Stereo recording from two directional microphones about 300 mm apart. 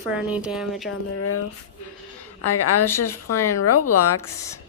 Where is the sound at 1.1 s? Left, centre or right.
Left.